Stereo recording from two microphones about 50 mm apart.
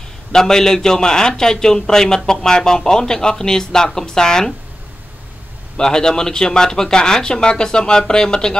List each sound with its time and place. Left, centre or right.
0.3 s a man's voice: centre
5.8 s a man's voice: centre